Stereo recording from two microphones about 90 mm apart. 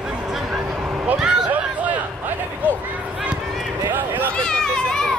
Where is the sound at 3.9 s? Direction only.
20° right (ahead or behind).